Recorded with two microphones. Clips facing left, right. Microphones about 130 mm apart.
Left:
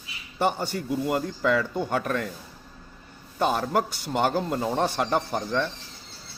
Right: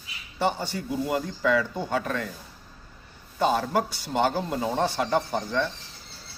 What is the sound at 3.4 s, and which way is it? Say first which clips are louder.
A man's voice: even; 50° left (ahead or behind).